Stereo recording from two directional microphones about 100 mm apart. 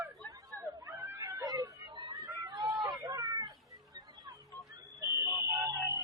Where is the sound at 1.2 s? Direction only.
40° right (ahead or behind).